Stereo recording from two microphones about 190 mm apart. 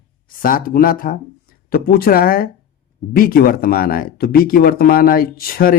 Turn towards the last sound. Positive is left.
turn(degrees=50)  # may be behind; listen again after turning